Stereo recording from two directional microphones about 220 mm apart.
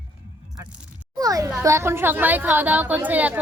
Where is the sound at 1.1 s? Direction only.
15° right (ahead or behind).